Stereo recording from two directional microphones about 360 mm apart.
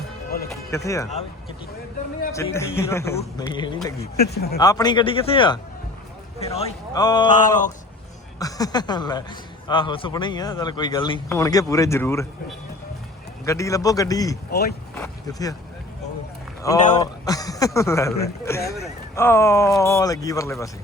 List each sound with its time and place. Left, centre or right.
0.5 s speech: centre
2.3 s speech: centre
3.9 s speech: left
4.5 s speech: centre
8.4 s speech: centre
13.4 s speech: centre
14.5 s speech: left
14.9 s speech: centre
17.0 s speech: centre